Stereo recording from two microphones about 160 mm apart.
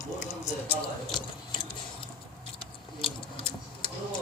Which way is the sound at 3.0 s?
35° left (ahead or behind).